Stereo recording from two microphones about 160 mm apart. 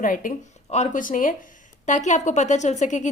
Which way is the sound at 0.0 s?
55° left (ahead or behind).